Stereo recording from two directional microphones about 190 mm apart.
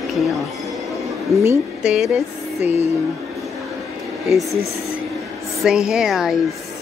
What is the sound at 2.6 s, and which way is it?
Music, 35° left (ahead or behind).